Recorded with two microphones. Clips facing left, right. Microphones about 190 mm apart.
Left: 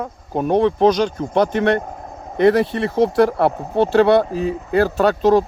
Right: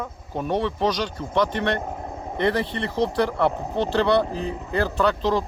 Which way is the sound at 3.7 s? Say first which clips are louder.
Left 8 dB; 55° left (ahead or behind).